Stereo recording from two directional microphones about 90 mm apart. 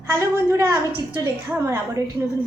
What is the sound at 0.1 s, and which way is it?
A woman's voice, 35° right (ahead or behind).